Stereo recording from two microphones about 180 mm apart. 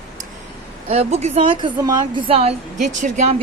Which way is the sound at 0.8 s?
35° right (ahead or behind).